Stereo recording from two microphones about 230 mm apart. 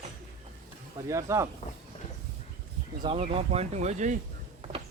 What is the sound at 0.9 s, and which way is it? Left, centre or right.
Speech, centre.